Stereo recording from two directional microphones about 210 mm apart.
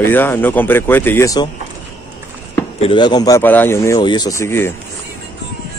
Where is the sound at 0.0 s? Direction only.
10° left (ahead or behind).